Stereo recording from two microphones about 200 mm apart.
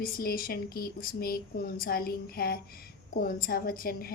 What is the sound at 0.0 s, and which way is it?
A woman's voice, 45° left (ahead or behind).